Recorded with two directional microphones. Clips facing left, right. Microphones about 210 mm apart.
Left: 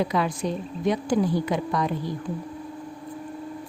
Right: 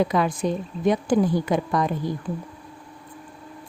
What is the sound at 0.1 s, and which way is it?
A woman's voice, 50° right (ahead or behind).